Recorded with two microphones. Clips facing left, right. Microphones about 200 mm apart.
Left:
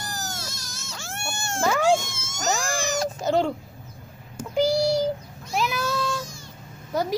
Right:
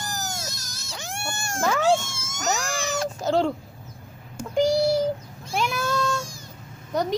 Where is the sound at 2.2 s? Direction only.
30° left (ahead or behind).